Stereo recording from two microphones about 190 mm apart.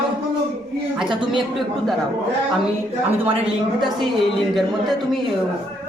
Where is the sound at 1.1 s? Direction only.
25° right (ahead or behind).